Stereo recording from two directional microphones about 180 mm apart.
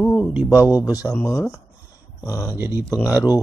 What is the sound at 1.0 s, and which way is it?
Speech, 15° left (ahead or behind).